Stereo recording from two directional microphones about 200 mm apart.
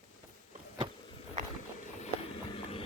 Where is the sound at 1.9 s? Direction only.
30° left (ahead or behind).